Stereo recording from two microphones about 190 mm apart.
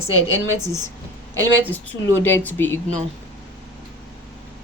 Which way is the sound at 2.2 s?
10° left (ahead or behind).